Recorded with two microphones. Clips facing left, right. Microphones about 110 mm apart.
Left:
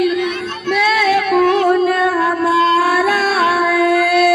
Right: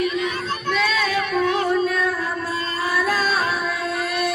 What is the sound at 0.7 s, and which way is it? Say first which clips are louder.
Female singing: left 8 dB; 70° left (ahead or behind).